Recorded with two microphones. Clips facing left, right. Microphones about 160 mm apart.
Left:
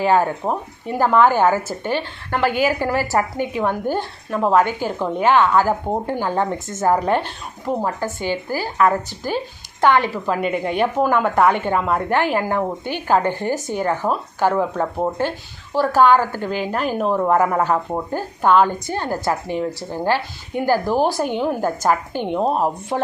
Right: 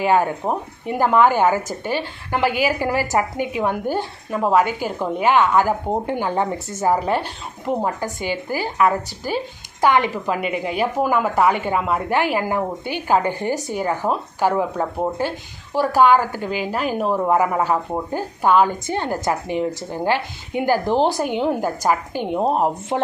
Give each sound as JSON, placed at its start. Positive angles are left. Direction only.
{"t": 0.0, "sound": "a woman's voice", "side_deg": -15}
{"t": 10.4, "sound": "a woman's voice", "side_deg": -5}